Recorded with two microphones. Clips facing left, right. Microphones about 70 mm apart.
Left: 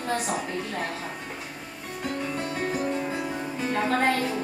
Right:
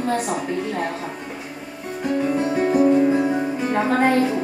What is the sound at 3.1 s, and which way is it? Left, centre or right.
Music, right.